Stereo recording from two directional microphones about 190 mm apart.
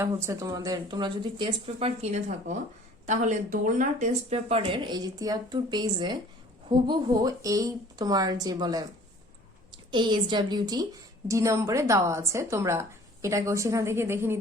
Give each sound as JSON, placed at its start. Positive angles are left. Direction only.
{"t": 0.0, "sound": "speech", "side_deg": -15}